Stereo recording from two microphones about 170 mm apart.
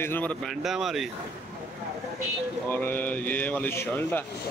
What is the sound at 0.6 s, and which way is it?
Speech, centre (ahead or behind).